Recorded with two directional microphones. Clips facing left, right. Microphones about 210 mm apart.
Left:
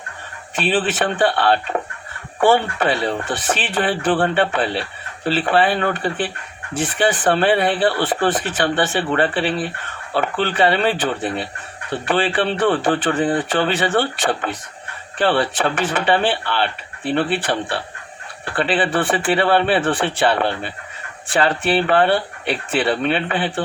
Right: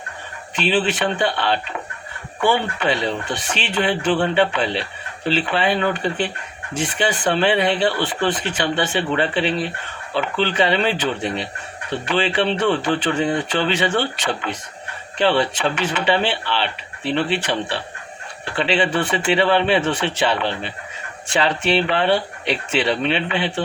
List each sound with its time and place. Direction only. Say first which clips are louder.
0.5 s speech: even; 50° left (ahead or behind)